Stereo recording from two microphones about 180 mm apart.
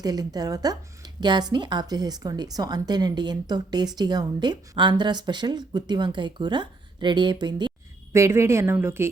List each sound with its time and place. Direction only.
0.0 s a woman's voice: 20° right (ahead or behind)